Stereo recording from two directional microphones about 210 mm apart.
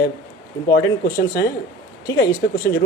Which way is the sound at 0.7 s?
60° left (ahead or behind).